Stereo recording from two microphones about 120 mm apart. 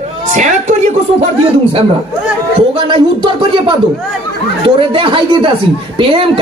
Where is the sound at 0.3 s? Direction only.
80° right.